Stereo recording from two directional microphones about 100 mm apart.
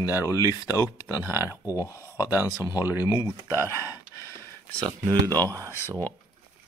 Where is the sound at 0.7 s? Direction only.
35° left (ahead or behind).